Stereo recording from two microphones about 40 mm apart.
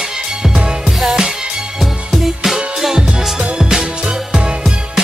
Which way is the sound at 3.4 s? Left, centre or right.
Centre.